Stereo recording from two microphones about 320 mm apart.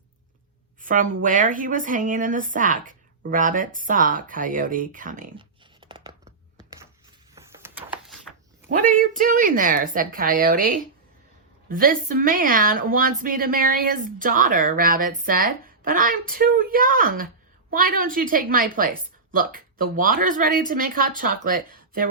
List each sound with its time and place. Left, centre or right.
0.8 s a woman's voice: right
7.3 s a sound: centre
8.9 s speech: right